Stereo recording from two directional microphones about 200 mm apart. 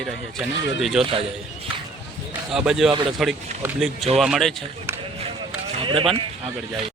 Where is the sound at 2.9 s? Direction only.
25° right (ahead or behind).